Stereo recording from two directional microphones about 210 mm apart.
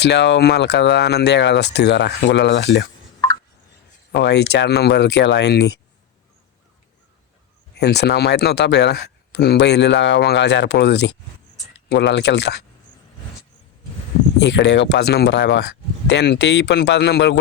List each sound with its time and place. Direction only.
0.0 s speech: 55° left (ahead or behind)
4.1 s speech: 55° left (ahead or behind)
7.8 s speech: 50° left (ahead or behind)
14.3 s speech: 55° left (ahead or behind)